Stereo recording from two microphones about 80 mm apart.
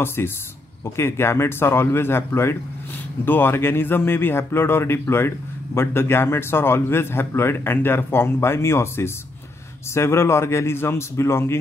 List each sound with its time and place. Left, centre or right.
0.0 s a man's voice: left